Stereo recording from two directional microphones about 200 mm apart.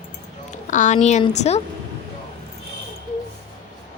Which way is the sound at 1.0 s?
35° left (ahead or behind).